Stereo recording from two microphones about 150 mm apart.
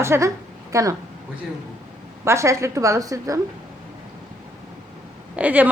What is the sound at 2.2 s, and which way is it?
Speech, 20° right (ahead or behind).